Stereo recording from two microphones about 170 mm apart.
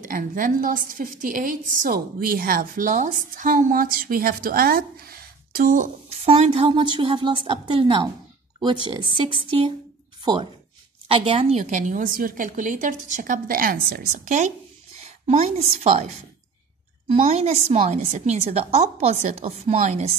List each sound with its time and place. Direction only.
0.0 s a woman's voice: 50° right (ahead or behind)
6.2 s a woman's voice: 35° right (ahead or behind)
17.2 s a woman's voice: 40° right (ahead or behind)